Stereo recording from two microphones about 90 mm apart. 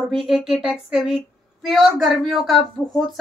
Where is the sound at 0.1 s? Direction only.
Centre (ahead or behind).